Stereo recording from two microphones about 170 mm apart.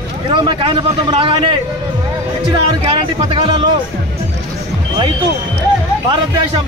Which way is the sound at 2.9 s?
30° right (ahead or behind).